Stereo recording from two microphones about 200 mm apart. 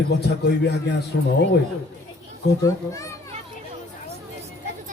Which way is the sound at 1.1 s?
60° left (ahead or behind).